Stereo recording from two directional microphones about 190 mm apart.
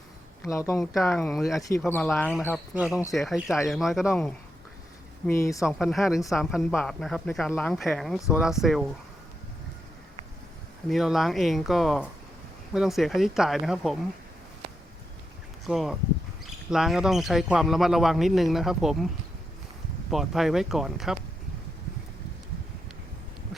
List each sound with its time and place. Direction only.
0.4 s speech: 15° left (ahead or behind)
0.9 s speech: centre (ahead or behind)
2.7 s speech: 5° right (ahead or behind); by 5.6 s 15° left (ahead or behind)
5.6 s speech: centre (ahead or behind)
10.8 s speech: centre (ahead or behind)
15.6 s speech: centre (ahead or behind)
20.1 s speech: centre (ahead or behind)